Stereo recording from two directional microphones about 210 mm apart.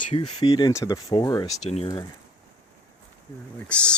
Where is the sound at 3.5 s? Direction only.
5° left (ahead or behind).